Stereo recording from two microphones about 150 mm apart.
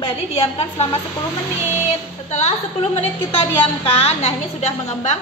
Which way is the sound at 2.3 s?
45° left (ahead or behind).